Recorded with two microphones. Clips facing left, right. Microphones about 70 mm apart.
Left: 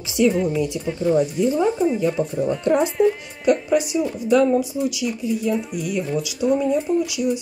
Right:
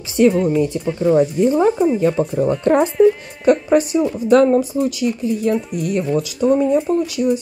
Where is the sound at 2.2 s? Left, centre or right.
Right.